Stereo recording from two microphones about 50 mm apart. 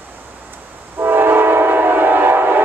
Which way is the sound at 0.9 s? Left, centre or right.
Right.